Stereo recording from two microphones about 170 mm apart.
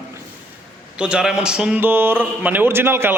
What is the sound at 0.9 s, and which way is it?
A man's voice, 5° right (ahead or behind).